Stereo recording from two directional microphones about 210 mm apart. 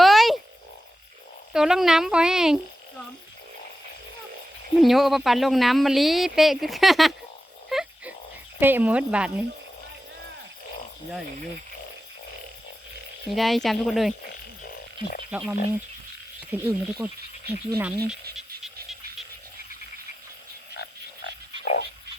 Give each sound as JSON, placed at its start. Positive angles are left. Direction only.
{"t": 0.0, "sound": "frog", "side_deg": 0}
{"t": 1.5, "sound": "speech", "side_deg": 0}
{"t": 4.8, "sound": "speech", "side_deg": 0}
{"t": 7.7, "sound": "dog", "side_deg": 0}
{"t": 8.5, "sound": "speech", "side_deg": -10}
{"t": 13.2, "sound": "speech", "side_deg": 0}
{"t": 15.3, "sound": "speech", "side_deg": -5}
{"t": 18.3, "sound": "frog", "side_deg": 0}
{"t": 20.7, "sound": "frog", "side_deg": 50}